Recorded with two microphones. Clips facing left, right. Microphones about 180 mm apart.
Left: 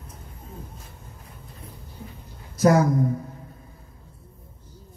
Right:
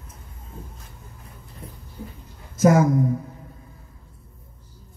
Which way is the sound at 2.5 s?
20° right (ahead or behind).